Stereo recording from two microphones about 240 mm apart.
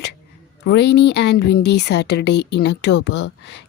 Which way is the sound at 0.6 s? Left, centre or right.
Left.